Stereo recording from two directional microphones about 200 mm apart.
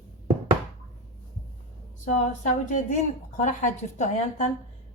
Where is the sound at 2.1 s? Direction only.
35° left (ahead or behind).